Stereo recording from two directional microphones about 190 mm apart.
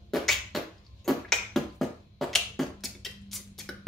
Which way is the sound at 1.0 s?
Centre (ahead or behind).